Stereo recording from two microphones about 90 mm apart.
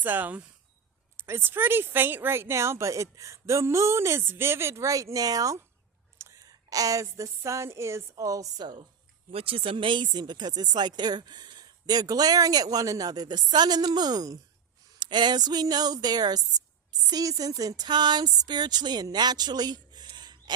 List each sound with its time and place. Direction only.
0.0 s a woman's voice: 20° right (ahead or behind); by 8.6 s 40° right (ahead or behind)
9.3 s speech: 90° right; by 20.1 s 50° right (ahead or behind)
20.1 s gasp: 50° right (ahead or behind)